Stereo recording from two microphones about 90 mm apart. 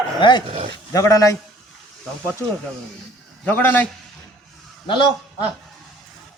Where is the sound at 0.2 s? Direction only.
60° left (ahead or behind).